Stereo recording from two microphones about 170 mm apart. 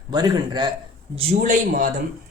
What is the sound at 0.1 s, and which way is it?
Speech, 25° right (ahead or behind).